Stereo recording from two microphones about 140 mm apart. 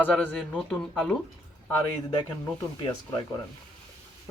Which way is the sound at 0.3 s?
Centre (ahead or behind).